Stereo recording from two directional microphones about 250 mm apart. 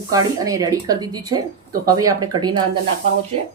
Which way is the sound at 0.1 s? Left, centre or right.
Centre.